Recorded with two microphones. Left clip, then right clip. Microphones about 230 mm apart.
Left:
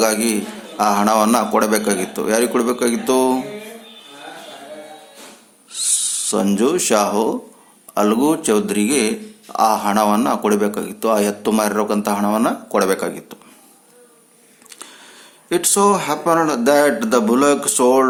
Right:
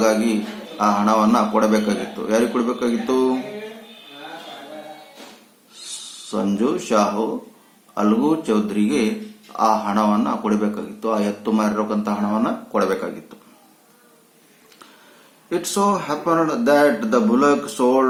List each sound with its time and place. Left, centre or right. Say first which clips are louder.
0.0 s speech: left 1 dB; left
6.3 s speech: left 4 dB; left
15.4 s speech: left 5 dB; left